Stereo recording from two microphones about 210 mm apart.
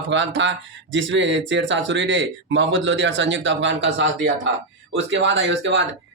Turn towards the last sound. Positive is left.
turn(degrees=-60)  # may be behind; listen again after turning